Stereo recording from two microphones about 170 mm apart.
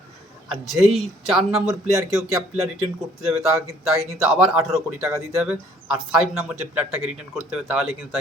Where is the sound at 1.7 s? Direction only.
15° right (ahead or behind).